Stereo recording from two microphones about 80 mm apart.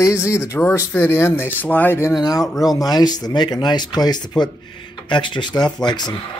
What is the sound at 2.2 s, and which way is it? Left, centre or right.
Speech, left.